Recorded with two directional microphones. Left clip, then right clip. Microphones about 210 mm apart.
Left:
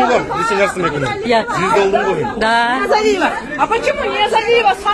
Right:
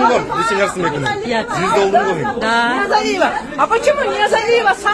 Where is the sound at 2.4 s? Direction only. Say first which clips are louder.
Left 2 dB; 20° left (ahead or behind).